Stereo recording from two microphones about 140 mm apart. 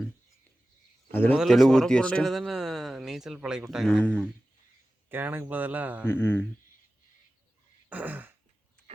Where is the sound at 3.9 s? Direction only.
10° left (ahead or behind).